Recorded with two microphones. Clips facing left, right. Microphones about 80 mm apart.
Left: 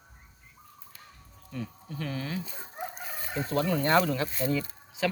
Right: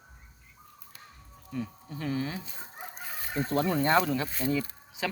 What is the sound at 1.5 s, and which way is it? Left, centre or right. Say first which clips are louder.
Speech: right 2 dB; centre.